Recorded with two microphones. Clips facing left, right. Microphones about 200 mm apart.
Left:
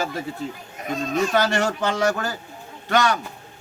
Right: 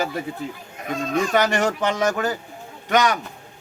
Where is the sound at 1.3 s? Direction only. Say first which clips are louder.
Right 1 dB; 15° right (ahead or behind).